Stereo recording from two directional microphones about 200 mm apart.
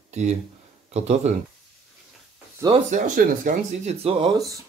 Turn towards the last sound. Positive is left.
turn(degrees=-20)  # may be behind; listen again after turning